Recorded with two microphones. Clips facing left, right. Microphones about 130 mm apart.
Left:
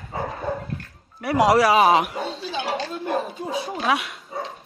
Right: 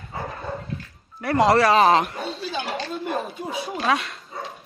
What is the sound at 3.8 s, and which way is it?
Speech, 5° left (ahead or behind).